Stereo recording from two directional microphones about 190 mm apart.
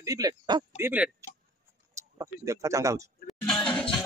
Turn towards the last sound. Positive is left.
turn(degrees=5)  # may be behind; listen again after turning